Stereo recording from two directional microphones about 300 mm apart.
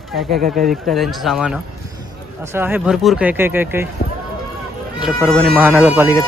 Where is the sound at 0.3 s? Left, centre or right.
Right.